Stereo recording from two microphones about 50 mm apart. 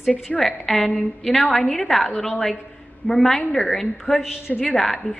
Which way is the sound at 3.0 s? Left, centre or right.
Left.